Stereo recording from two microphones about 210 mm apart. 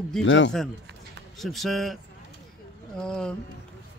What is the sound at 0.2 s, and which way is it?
Speech, 60° left (ahead or behind).